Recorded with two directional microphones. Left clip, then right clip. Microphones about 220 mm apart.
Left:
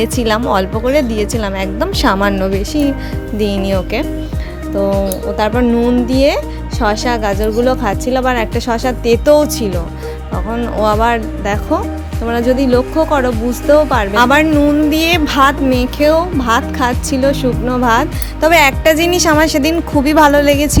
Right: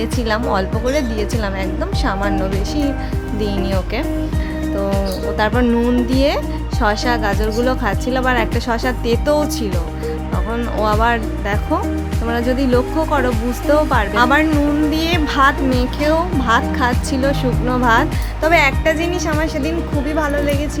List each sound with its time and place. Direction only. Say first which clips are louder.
0.0 s speech: left 5 dB; 30° left (ahead or behind)
5.4 s speech: left 3 dB; 20° left (ahead or behind)
18.3 s speech: left 5 dB; 35° left (ahead or behind)